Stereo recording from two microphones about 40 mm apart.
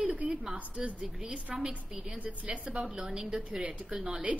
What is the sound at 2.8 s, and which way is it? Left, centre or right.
A woman's voice, centre.